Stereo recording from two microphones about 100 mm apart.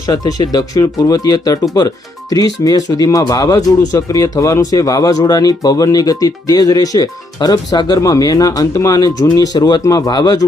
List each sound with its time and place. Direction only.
0.0 s speech: 40° left (ahead or behind)